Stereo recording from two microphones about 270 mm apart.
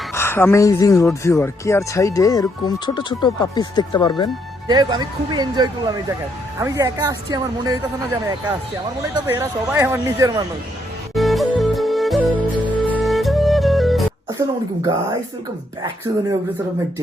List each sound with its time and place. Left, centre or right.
0.1 s speech: centre
4.7 s speech: centre
9.2 s speech: centre
11.1 s music: centre
14.3 s speech: centre